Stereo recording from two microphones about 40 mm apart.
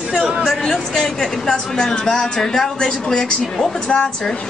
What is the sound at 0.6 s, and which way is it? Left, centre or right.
A woman's voice, centre.